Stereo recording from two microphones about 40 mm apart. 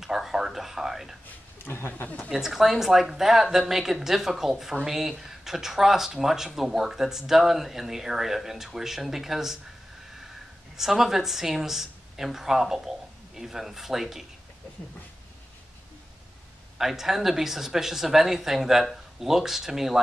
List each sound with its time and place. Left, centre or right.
0.0 s speech: centre
1.6 s speech: left
2.3 s speech: centre
10.8 s speech: centre
16.7 s speech: centre